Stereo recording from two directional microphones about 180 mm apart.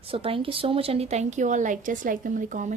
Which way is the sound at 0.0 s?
30° right (ahead or behind).